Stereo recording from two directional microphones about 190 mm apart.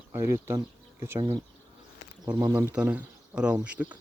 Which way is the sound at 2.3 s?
10° right (ahead or behind).